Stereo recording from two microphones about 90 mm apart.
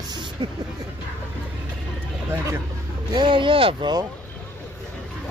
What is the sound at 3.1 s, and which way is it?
Speech, 65° right (ahead or behind).